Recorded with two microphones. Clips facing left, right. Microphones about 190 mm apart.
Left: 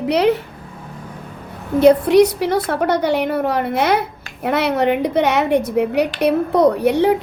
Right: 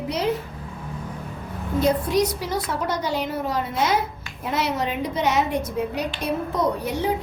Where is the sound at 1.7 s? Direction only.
65° left (ahead or behind).